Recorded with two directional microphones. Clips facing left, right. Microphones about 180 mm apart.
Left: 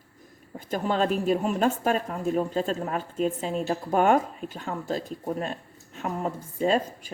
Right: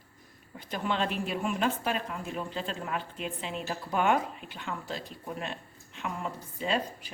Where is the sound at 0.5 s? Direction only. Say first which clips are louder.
Left 5 dB; 40° left (ahead or behind).